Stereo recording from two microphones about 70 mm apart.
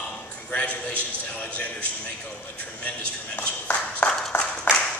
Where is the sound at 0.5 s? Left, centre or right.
Centre.